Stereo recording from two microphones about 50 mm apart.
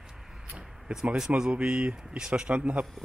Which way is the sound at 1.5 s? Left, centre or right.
Right.